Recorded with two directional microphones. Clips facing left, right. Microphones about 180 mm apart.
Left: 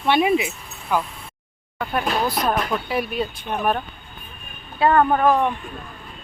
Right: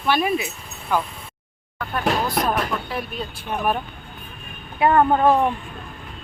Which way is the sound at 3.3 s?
10° right (ahead or behind).